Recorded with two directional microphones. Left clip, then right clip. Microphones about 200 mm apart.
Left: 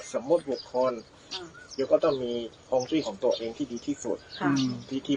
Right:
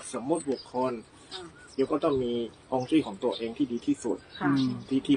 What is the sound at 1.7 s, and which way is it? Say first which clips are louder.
Speech: left 3 dB; 50° right (ahead or behind).